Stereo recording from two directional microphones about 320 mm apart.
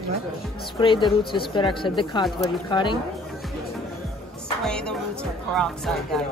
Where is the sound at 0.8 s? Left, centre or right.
Centre.